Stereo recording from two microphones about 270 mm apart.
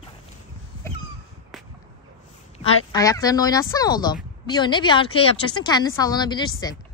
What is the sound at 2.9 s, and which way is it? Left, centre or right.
Speech, centre.